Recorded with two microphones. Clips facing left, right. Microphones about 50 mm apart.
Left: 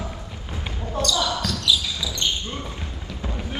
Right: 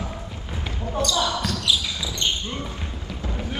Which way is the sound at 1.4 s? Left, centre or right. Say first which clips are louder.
Left 1 dB; right.